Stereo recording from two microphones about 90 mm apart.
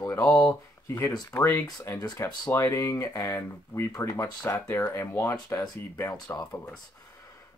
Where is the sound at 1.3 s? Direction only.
25° left (ahead or behind); by 4.6 s 40° left (ahead or behind).